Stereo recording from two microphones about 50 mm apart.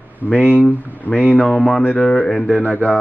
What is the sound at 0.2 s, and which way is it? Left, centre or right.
Speech, left.